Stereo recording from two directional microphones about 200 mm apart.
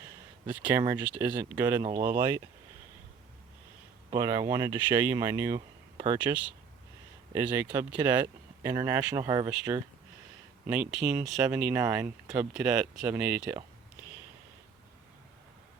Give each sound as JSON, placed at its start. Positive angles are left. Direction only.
{"t": 0.5, "sound": "speech", "side_deg": -10}
{"t": 4.1, "sound": "speech", "side_deg": -20}
{"t": 7.3, "sound": "speech", "side_deg": -10}
{"t": 10.7, "sound": "speech", "side_deg": -5}